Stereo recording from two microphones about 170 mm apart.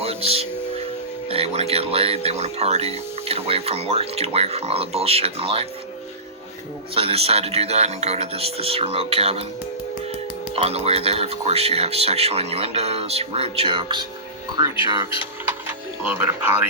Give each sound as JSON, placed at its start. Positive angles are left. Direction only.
{"t": 0.0, "sound": "music", "side_deg": -35}
{"t": 1.3, "sound": "speech", "side_deg": -35}
{"t": 6.9, "sound": "speech", "side_deg": -35}
{"t": 10.5, "sound": "speech", "side_deg": -35}
{"t": 15.6, "sound": "speech", "side_deg": -15}